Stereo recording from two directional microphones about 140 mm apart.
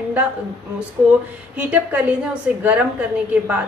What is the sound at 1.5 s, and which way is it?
Speech, 10° right (ahead or behind).